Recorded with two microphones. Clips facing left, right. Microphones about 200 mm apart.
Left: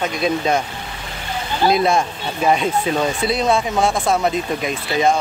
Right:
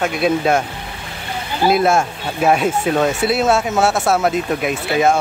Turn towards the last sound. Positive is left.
turn(degrees=-5)  # may be behind; listen again after turning